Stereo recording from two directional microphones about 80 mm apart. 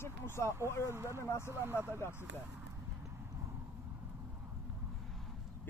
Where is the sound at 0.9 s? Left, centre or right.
Right.